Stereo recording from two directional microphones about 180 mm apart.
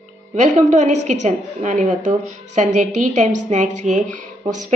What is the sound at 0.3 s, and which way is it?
A woman's voice, 40° right (ahead or behind).